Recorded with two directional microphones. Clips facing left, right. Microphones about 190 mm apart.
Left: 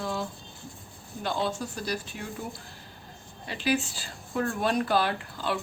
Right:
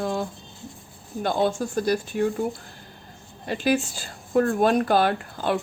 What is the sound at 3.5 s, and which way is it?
Speech, 45° right (ahead or behind).